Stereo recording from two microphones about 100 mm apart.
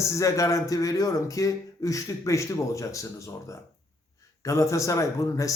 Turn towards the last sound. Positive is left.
turn(degrees=35)  # may be behind; listen again after turning